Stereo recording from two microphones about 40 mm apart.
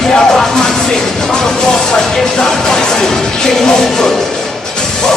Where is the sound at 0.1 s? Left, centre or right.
Centre.